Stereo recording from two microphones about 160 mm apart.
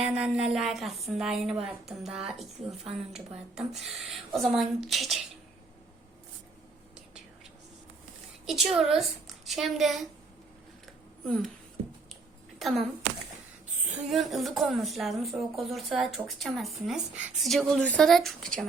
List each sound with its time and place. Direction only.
0.0 s a woman's voice: 5° right (ahead or behind)
8.4 s a woman's voice: centre (ahead or behind)
11.3 s a woman's voice: 5° left (ahead or behind)
12.5 s a sound: centre (ahead or behind)
13.9 s a woman's voice: centre (ahead or behind)